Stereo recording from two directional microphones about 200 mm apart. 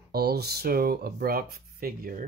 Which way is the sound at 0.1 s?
55° right (ahead or behind).